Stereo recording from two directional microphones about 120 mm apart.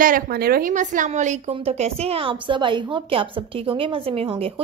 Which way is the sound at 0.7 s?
90° right.